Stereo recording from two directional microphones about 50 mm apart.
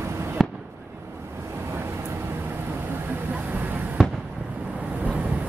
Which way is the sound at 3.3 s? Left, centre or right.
Right.